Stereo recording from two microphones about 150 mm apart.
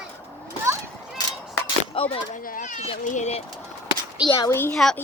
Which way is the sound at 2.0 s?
35° left (ahead or behind).